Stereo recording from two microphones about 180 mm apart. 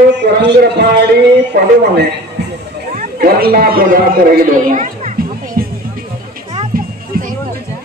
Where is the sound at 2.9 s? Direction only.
50° right (ahead or behind).